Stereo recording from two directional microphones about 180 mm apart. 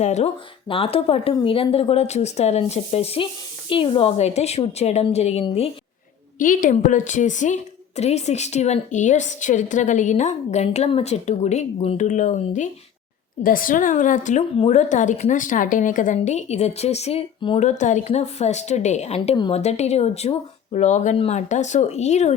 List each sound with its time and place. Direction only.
0.0 s a woman's voice: 40° left (ahead or behind)
6.4 s a woman's voice: 45° left (ahead or behind); by 17.7 s 30° left (ahead or behind)
17.7 s a woman's voice: 45° left (ahead or behind)